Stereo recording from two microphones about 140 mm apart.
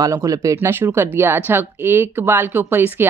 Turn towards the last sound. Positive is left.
turn(degrees=-15)  # may be behind; listen again after turning